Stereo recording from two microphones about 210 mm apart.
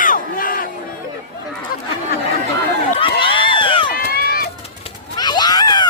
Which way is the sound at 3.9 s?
45° left (ahead or behind).